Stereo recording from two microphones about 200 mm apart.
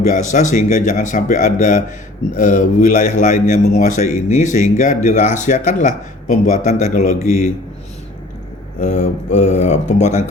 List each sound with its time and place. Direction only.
0.0 s speech: 35° left (ahead or behind)
8.8 s speech: 35° left (ahead or behind)